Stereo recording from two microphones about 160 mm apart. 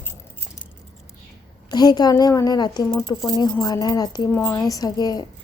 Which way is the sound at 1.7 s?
25° left (ahead or behind).